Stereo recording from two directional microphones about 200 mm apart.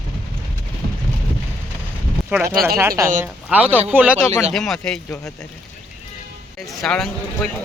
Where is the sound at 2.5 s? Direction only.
50° right (ahead or behind).